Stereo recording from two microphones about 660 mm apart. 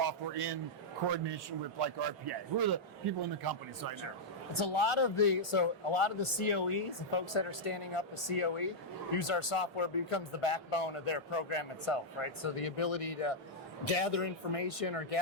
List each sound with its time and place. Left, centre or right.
1.2 s a man's voice: right
4.5 s speech: left